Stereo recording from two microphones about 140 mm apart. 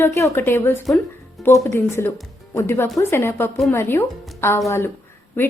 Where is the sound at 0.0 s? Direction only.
20° left (ahead or behind).